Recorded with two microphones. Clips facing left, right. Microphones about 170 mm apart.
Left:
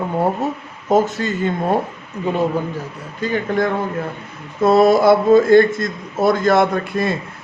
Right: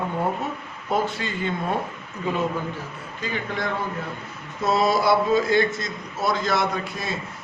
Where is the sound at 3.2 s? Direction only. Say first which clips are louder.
Left 10 dB; 45° left (ahead or behind).